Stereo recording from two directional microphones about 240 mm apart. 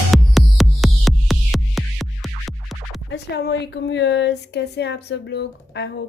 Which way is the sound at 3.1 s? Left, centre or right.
Left.